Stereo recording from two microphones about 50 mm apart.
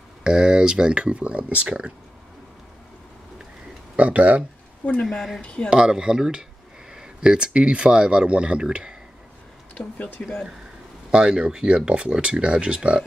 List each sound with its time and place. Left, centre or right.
0.2 s speech: centre
3.9 s speech: right
5.0 s speech: centre
5.4 s speech: left
5.7 s speech: centre
10.2 s speech: centre
11.1 s speech: centre